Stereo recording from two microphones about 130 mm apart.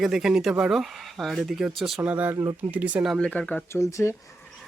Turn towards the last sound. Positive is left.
turn(degrees=25)  # may be behind; listen again after turning